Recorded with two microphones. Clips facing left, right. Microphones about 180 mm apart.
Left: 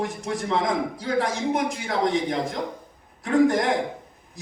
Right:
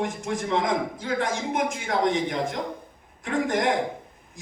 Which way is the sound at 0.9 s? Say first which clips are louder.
Left 2 dB; 35° left (ahead or behind).